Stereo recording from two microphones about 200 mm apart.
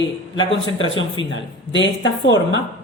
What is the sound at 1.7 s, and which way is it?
Speech, 65° left (ahead or behind).